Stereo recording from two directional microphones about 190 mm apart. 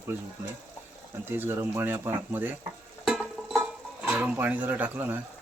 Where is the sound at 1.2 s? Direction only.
10° right (ahead or behind).